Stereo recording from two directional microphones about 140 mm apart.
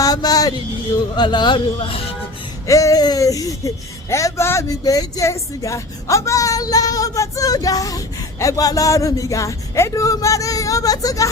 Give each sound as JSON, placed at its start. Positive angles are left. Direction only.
{"t": 0.0, "sound": "speech", "side_deg": 25}
{"t": 2.6, "sound": "speech", "side_deg": 25}